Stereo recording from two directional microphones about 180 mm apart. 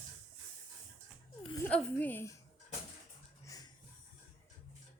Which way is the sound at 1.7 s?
5° left (ahead or behind).